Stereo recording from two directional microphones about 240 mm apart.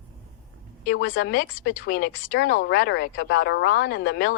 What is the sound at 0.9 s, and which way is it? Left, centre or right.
Speech, left.